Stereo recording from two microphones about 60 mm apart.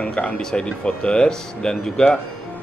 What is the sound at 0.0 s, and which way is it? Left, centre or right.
Speech, left.